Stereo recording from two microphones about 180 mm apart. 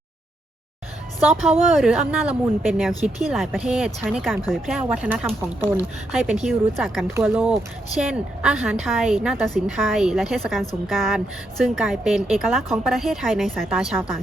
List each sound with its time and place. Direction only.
1.3 s speech: centre (ahead or behind)
6.1 s speech: centre (ahead or behind)